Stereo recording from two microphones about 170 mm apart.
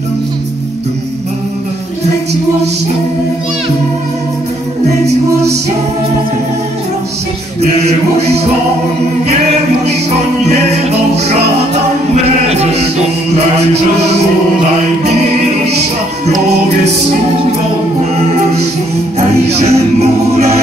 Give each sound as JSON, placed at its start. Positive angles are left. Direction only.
{"t": 10.5, "sound": "music", "side_deg": -40}
{"t": 19.1, "sound": "music", "side_deg": -40}